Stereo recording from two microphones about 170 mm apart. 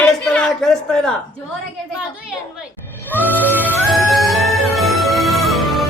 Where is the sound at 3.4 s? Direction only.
10° right (ahead or behind).